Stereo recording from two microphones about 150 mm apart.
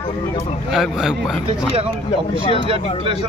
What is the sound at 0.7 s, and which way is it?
Speech, 5° right (ahead or behind).